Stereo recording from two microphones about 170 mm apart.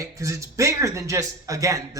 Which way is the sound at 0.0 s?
20° right (ahead or behind).